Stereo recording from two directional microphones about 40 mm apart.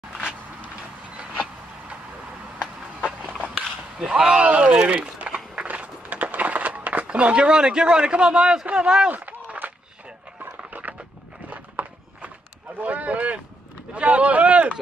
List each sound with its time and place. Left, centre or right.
1.1 s vehicle: right
2.6 s a sound: centre
4.0 s speech: right
5.2 s a sound: right; by 8.6 s centre
8.7 s speech: right
9.1 s run: right
10.4 s a sound: right
11.5 s walk: right
12.7 s speech: right